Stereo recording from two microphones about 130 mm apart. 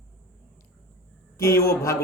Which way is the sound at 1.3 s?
25° left (ahead or behind).